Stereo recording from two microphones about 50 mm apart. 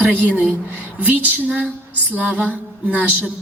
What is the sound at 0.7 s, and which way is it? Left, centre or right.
A woman's voice, right.